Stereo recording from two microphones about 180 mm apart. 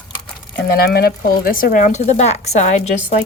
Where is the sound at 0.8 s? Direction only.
60° left (ahead or behind).